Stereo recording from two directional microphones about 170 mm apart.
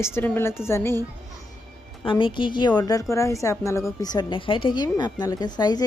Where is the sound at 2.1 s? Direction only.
30° left (ahead or behind).